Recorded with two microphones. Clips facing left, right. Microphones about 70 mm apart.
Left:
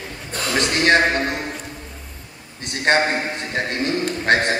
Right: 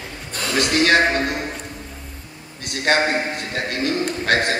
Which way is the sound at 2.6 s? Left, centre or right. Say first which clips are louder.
Left 1 dB; left.